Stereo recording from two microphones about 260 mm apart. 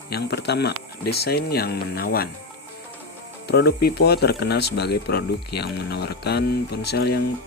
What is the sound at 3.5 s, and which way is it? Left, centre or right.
Speech, left.